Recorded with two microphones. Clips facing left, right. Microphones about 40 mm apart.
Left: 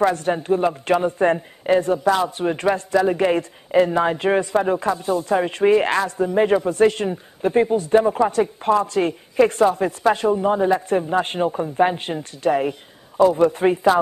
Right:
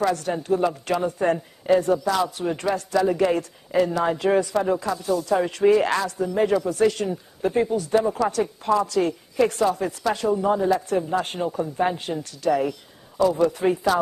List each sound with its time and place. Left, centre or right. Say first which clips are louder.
0.0 s speech: left 4 dB; left